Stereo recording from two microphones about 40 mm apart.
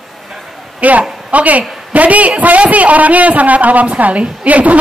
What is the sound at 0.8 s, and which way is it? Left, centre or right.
Speech, right.